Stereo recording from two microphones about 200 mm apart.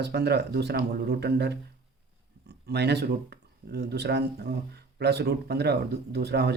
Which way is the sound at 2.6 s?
55° right (ahead or behind).